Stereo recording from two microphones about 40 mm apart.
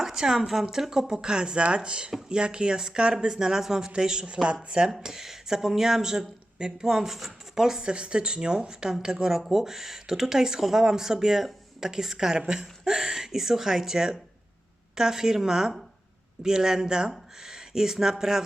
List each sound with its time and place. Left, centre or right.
0.0 s speech: centre
5.0 s speech: centre
7.8 s a woman's voice: right